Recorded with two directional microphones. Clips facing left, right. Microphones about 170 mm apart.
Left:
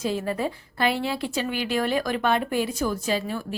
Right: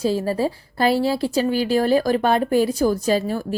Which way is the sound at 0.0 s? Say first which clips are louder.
Right 6 dB; 35° right (ahead or behind).